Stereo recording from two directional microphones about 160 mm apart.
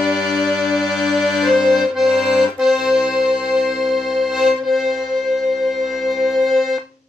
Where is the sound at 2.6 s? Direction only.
5° right (ahead or behind).